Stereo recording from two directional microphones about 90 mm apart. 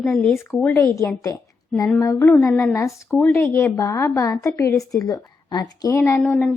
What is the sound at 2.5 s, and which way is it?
Speech, 5° left (ahead or behind).